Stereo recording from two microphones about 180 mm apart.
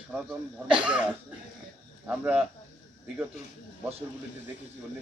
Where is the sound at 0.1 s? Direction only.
5° right (ahead or behind).